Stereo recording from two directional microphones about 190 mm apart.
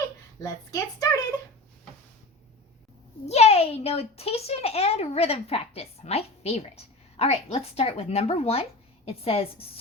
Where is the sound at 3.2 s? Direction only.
35° left (ahead or behind).